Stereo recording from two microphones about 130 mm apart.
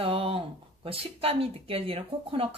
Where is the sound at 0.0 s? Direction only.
45° right (ahead or behind).